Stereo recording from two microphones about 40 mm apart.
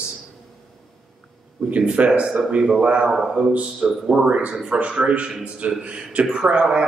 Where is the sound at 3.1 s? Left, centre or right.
Centre.